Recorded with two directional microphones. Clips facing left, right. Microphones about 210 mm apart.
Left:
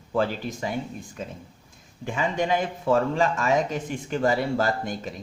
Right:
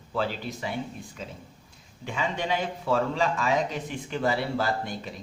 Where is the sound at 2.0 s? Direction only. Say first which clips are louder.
Left 4 dB; 45° left (ahead or behind).